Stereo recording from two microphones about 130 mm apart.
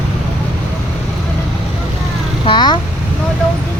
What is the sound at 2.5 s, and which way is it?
Speech, 35° left (ahead or behind).